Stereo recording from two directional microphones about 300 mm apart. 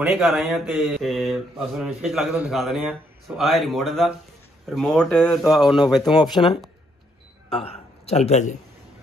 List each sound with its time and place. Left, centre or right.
0.0 s speech: centre
6.3 s a man's voice: centre